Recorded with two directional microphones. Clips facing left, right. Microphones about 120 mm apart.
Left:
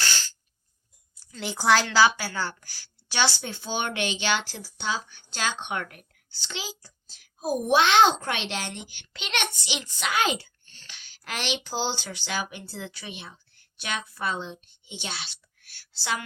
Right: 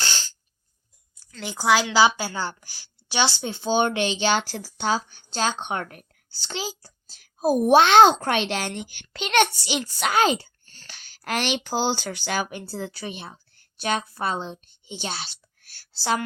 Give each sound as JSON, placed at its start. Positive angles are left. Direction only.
{"t": 0.0, "sound": "a sound", "side_deg": -20}
{"t": 1.1, "sound": "a woman's voice", "side_deg": 5}
{"t": 2.0, "sound": "a woman's voice", "side_deg": -20}